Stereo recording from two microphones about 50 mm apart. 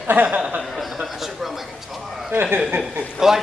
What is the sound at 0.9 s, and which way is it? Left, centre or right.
Speech, centre.